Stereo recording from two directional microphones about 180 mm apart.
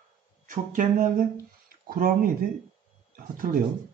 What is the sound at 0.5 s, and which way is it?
Speech, 45° right (ahead or behind).